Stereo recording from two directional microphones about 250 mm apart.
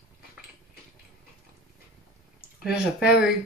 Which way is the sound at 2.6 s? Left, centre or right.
Centre.